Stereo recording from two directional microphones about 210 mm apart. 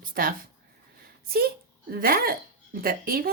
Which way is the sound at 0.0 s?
40° right (ahead or behind).